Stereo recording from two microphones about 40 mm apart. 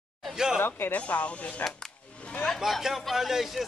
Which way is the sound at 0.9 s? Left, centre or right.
Left.